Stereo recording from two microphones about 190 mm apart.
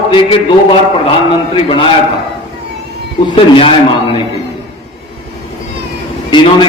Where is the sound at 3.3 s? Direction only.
25° left (ahead or behind).